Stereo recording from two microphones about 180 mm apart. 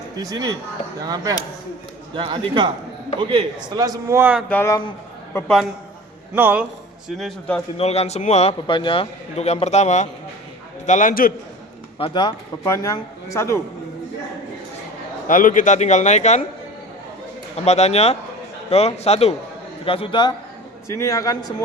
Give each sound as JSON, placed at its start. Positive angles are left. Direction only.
{"t": 0.2, "sound": "a man's voice", "side_deg": -20}
{"t": 4.4, "sound": "a man's voice", "side_deg": 10}
{"t": 6.3, "sound": "a man's voice", "side_deg": -10}
{"t": 7.1, "sound": "speech", "side_deg": 0}
{"t": 7.8, "sound": "a man's voice", "side_deg": 35}
{"t": 11.9, "sound": "a man's voice", "side_deg": 30}
{"t": 12.6, "sound": "a man's voice", "side_deg": 15}
{"t": 15.3, "sound": "a man's voice", "side_deg": 50}
{"t": 17.7, "sound": "a man's voice", "side_deg": 35}
{"t": 20.8, "sound": "a man's voice", "side_deg": 15}